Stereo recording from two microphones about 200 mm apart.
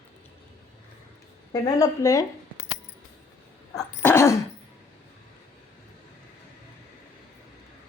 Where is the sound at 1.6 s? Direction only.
15° left (ahead or behind).